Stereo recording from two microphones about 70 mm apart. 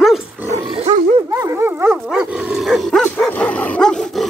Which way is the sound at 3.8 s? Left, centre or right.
Centre.